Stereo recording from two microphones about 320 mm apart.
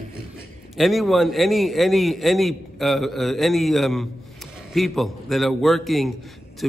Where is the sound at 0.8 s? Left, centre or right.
Centre.